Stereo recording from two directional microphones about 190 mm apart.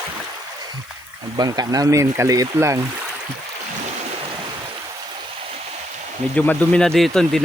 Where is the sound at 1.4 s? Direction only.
20° right (ahead or behind).